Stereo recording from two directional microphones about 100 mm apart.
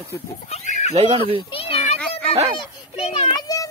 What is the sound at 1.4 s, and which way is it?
Speech, 60° left (ahead or behind).